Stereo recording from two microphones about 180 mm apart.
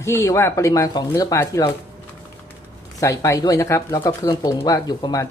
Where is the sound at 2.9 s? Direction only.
20° left (ahead or behind).